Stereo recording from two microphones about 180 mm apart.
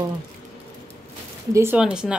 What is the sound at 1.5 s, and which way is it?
Speech, 10° right (ahead or behind).